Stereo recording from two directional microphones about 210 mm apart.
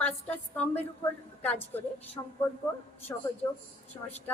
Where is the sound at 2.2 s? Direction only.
15° left (ahead or behind).